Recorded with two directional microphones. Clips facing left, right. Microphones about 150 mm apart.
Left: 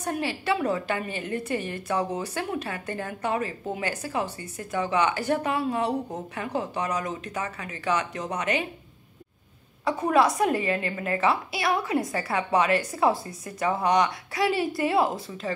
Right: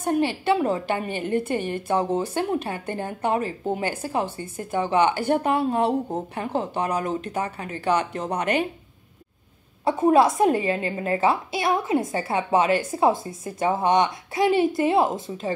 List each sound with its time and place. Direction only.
0.0 s a woman's voice: 30° right (ahead or behind)
8.4 s speech: 55° right (ahead or behind)
9.8 s a woman's voice: 25° right (ahead or behind)